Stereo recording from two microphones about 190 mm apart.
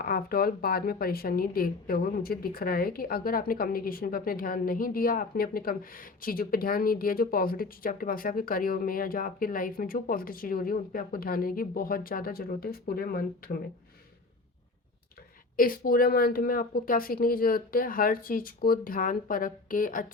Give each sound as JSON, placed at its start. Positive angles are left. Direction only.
{"t": 0.0, "sound": "a woman's voice", "side_deg": 50}
{"t": 15.5, "sound": "a woman's voice", "side_deg": 50}